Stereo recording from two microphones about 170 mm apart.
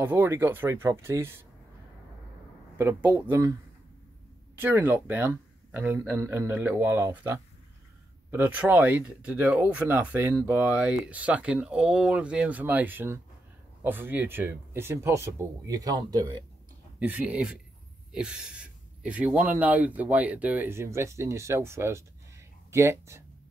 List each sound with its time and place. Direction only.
0.0 s speech: 10° right (ahead or behind)
2.8 s speech: 10° right (ahead or behind)
4.6 s speech: 10° right (ahead or behind)
17.0 s speech: 10° right (ahead or behind)